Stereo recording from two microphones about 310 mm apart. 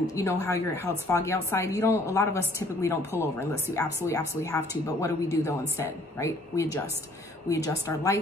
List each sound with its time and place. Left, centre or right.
0.1 s a woman's voice: centre